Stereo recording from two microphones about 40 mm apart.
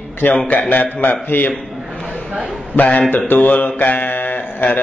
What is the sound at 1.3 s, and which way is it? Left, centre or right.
Speech, left.